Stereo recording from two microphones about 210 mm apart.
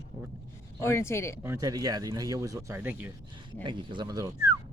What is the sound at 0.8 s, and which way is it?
Speech, 10° left (ahead or behind).